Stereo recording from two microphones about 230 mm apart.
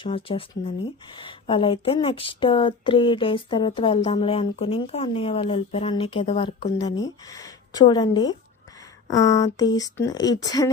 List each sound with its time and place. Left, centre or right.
0.0 s speech: left